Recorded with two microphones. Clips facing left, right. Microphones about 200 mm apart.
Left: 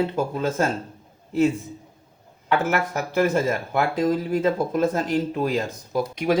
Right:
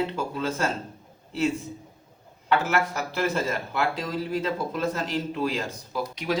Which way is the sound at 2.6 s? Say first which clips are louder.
Left 2 dB; 50° left (ahead or behind).